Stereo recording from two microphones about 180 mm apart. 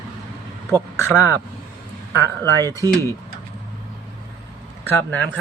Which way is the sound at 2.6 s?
20° right (ahead or behind).